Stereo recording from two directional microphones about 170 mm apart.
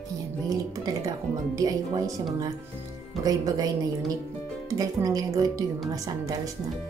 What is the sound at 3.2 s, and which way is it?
A woman's voice, 20° right (ahead or behind).